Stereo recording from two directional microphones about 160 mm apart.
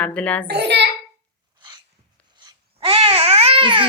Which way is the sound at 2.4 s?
30° right (ahead or behind).